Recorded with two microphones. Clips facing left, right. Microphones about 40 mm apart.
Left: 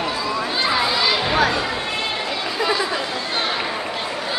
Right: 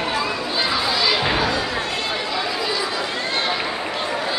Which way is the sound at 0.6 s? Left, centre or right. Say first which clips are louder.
Left 1 dB; centre.